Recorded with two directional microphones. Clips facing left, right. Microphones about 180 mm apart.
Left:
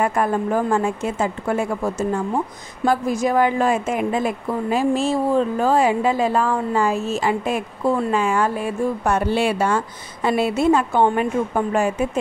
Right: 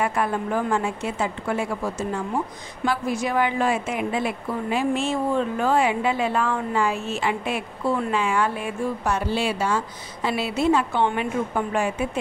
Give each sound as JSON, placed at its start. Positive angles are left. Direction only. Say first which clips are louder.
{"t": 0.0, "sound": "a woman's voice", "louder": "left 4 dB", "side_deg": 45}
{"t": 9.0, "sound": "a woman's voice", "louder": "left 5 dB", "side_deg": 55}